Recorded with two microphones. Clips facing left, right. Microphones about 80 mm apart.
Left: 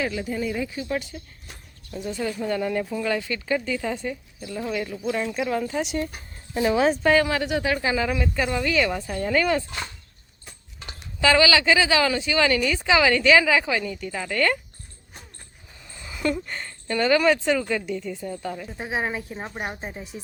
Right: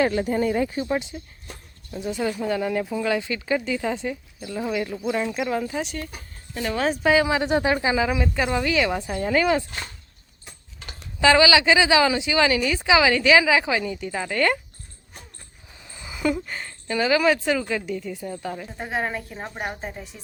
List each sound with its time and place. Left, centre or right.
0.0 s speech: right
0.8 s a woman's voice: right
2.4 s a woman's voice: centre
6.5 s speech: centre
6.9 s a woman's voice: centre
7.4 s a woman's voice: right; by 9.6 s centre
11.2 s a woman's voice: centre
15.8 s speech: centre
18.8 s a woman's voice: centre